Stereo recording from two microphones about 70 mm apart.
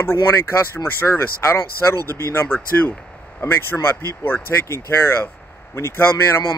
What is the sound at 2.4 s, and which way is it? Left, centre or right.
Speech, left.